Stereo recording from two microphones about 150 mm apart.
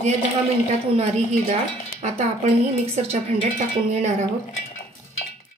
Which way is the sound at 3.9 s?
50° right (ahead or behind).